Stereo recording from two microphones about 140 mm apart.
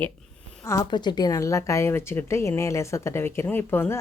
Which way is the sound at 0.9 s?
30° left (ahead or behind).